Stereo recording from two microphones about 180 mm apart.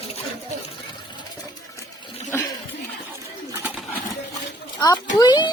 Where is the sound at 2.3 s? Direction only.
15° left (ahead or behind).